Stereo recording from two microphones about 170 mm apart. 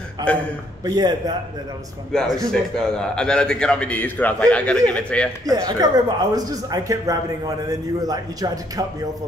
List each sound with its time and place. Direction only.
0.3 s a man's voice: 5° left (ahead or behind)
0.8 s speech: 25° right (ahead or behind)
2.3 s a man's voice: 5° left (ahead or behind)
5.4 s speech: 20° right (ahead or behind)